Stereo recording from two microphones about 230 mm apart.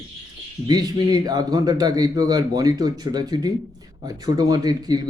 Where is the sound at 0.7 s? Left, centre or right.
Centre.